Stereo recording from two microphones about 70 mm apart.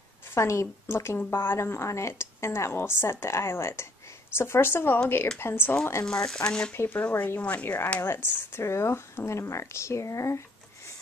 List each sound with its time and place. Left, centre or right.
0.3 s a woman's voice: left
6.0 s speech: centre
6.7 s a woman's voice: left